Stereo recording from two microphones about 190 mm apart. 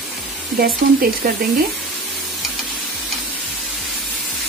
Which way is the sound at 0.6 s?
55° right (ahead or behind).